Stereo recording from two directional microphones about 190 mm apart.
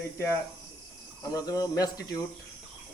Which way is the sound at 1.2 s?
20° left (ahead or behind).